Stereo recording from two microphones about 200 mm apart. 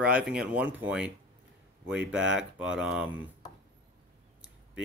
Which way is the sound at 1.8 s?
60° right (ahead or behind).